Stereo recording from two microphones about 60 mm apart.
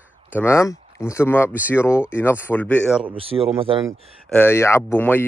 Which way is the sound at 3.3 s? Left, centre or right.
Right.